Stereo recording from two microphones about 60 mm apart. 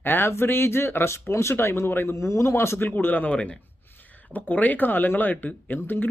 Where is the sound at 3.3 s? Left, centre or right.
Centre; by 6.1 s left.